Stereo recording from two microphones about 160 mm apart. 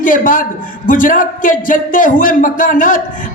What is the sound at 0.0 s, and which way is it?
A man's voice, 60° left (ahead or behind).